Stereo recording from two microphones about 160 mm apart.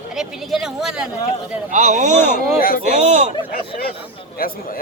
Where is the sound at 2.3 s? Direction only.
65° left (ahead or behind).